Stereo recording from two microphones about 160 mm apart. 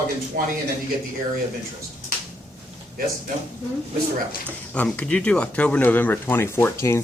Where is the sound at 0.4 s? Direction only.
60° right (ahead or behind).